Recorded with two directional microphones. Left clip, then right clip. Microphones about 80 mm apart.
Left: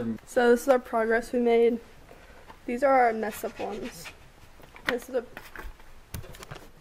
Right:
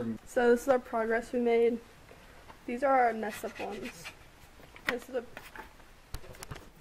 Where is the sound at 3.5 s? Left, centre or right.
Right.